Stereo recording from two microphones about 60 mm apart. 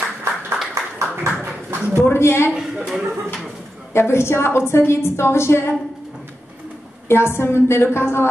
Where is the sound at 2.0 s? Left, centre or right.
Left.